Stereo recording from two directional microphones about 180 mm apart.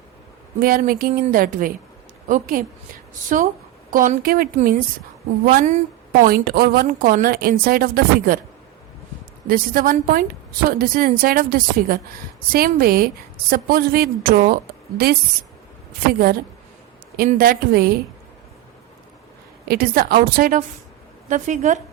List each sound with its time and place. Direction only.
0.6 s a woman's voice: 55° right (ahead or behind)
6.2 s a woman's voice: 55° right (ahead or behind)
9.5 s a woman's voice: 55° right (ahead or behind)
17.3 s a woman's voice: 55° right (ahead or behind)
19.6 s a woman's voice: 55° right (ahead or behind)